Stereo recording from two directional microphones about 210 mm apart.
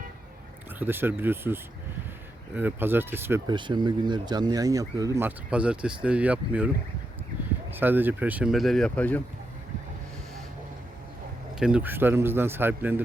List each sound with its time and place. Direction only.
0.8 s speech: 10° right (ahead or behind)
2.6 s speech: 10° right (ahead or behind)
7.7 s speech: 10° right (ahead or behind); by 9.2 s 5° left (ahead or behind)
11.6 s speech: 5° right (ahead or behind)